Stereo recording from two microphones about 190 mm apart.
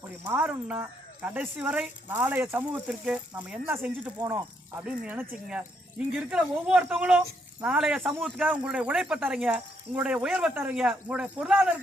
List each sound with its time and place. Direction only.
0.3 s speech: 5° right (ahead or behind)